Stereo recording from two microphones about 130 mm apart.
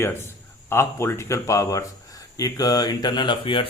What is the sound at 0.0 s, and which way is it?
A man's voice, 20° left (ahead or behind).